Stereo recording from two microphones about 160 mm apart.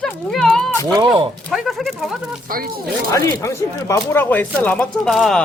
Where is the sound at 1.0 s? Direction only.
30° right (ahead or behind).